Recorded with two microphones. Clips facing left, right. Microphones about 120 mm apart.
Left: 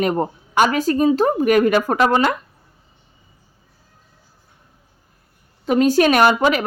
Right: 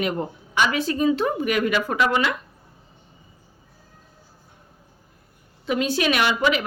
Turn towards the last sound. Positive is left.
turn(degrees=45)  # may be behind; listen again after turning